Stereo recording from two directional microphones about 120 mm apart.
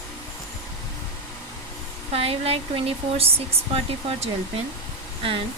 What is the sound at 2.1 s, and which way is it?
Speech, 55° right (ahead or behind).